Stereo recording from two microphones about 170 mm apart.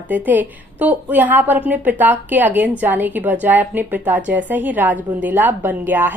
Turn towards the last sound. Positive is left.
turn(degrees=-10)  # may be behind; listen again after turning